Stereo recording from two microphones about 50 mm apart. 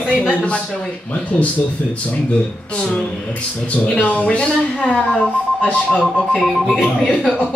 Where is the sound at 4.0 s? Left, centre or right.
Left.